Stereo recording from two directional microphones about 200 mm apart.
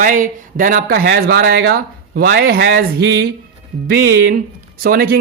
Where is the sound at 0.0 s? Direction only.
40° right (ahead or behind).